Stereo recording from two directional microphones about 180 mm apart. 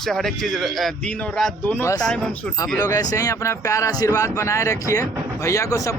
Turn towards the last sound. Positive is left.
turn(degrees=20)  # may be behind; listen again after turning